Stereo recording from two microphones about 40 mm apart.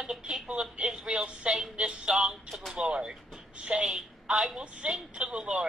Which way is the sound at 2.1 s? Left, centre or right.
Centre.